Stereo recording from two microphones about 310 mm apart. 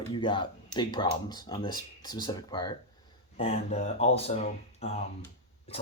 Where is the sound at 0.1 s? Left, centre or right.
Centre.